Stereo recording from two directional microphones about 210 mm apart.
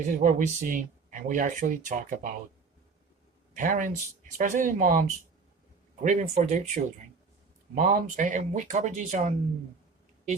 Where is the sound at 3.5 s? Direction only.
35° right (ahead or behind).